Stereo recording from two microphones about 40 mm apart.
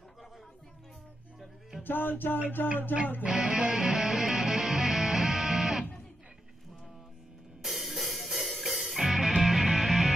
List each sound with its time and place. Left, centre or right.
1.8 s music: left
3.3 s music: centre
7.6 s music: centre